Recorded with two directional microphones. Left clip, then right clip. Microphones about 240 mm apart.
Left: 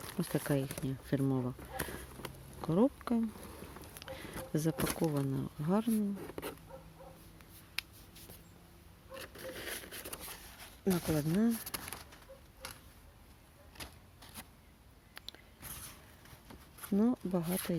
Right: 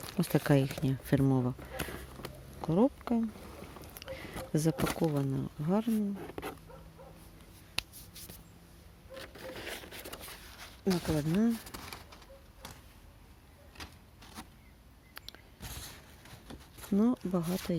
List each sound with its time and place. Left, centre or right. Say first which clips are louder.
0.1 s speech: right 6 dB; centre
2.6 s speech: right 2 dB; centre
3.8 s a sound: right 3 dB; centre
5.1 s speech: right 2 dB; centre
9.2 s a sound: right 1 dB; centre
10.8 s speech: right 2 dB; centre
16.9 s speech: right 2 dB; centre